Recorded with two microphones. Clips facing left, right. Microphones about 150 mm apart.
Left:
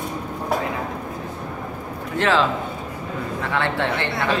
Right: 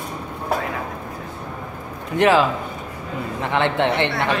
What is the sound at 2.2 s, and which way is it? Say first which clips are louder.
A man's voice: right 3 dB; 15° right (ahead or behind).